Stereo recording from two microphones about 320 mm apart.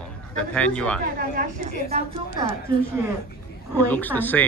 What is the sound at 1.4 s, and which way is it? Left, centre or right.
A woman's voice, centre.